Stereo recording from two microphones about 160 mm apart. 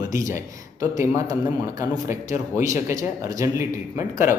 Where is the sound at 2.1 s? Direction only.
20° right (ahead or behind).